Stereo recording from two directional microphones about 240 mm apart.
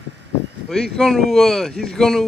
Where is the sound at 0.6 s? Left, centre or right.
Centre.